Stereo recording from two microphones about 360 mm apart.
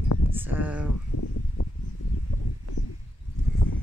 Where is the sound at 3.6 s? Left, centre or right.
Left.